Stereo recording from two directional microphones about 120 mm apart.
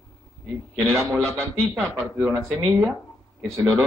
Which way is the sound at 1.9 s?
15° right (ahead or behind).